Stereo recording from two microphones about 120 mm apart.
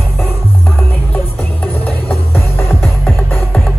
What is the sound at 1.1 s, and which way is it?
Music, 15° left (ahead or behind).